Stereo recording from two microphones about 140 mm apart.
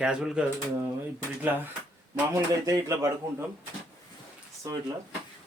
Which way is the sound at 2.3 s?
20° right (ahead or behind).